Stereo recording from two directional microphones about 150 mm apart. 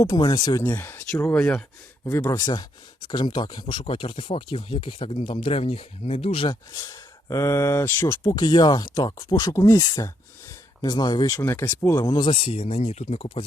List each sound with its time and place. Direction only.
0.0 s speech: 25° left (ahead or behind)
0.6 s speech: 15° left (ahead or behind)
2.3 s speech: 30° left (ahead or behind)
8.2 s speech: 30° left (ahead or behind)